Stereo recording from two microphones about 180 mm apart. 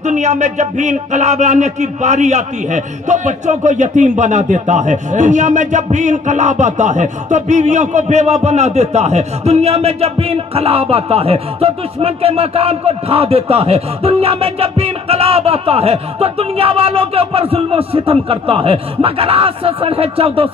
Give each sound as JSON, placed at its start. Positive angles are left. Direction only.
{"t": 0.0, "sound": "speech", "side_deg": -40}